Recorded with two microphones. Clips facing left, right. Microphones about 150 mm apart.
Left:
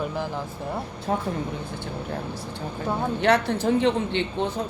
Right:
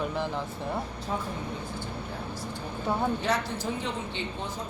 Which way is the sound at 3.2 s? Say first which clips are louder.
Left 8 dB; 65° left (ahead or behind).